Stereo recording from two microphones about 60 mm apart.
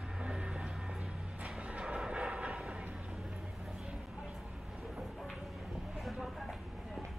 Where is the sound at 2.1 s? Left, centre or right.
Right.